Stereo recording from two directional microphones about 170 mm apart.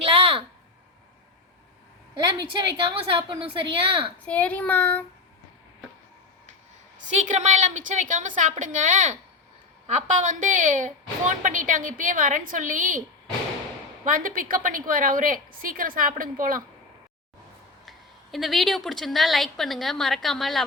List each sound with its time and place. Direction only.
0.0 s a sound: 35° right (ahead or behind)
2.6 s a woman's voice: 30° right (ahead or behind)
4.3 s speech: 10° left (ahead or behind)
7.1 s a woman's voice: 45° right (ahead or behind)
14.0 s a woman's voice: 50° right (ahead or behind)
17.8 s a woman's voice: centre (ahead or behind)